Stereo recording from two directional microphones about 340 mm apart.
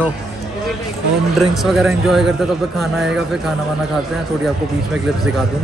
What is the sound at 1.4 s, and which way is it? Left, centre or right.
A man's voice, centre.